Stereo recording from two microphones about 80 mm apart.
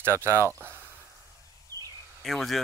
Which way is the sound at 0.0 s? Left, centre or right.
Right.